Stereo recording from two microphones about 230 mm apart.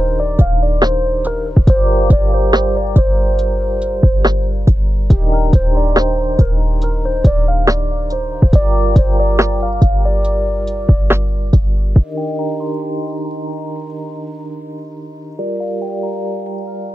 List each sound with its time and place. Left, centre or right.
0.0 s music: centre
0.6 s music: centre
1.2 s music: centre
2.1 s music: centre
5.0 s music: centre
5.8 s music: centre
6.8 s music: centre
7.6 s music: centre
8.5 s music: centre
9.3 s music: centre
10.2 s music: centre